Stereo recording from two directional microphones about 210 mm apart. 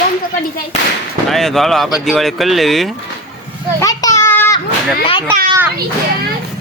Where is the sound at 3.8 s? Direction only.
15° left (ahead or behind).